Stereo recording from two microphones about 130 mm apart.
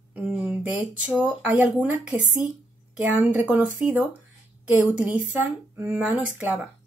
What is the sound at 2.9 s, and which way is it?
Speech, 10° right (ahead or behind).